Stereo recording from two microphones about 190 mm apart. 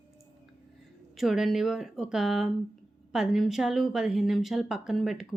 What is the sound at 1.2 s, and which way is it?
A woman's voice, centre (ahead or behind).